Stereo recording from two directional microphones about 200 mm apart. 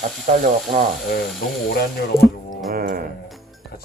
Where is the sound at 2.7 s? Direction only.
50° right (ahead or behind).